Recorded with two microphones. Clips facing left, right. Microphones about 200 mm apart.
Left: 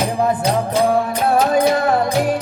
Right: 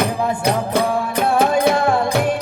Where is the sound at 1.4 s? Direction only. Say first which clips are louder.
Even; 60° right (ahead or behind).